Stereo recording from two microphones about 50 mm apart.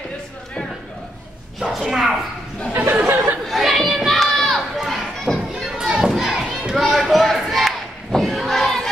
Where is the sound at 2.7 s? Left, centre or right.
Right.